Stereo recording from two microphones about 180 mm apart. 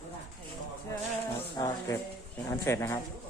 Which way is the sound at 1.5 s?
15° left (ahead or behind).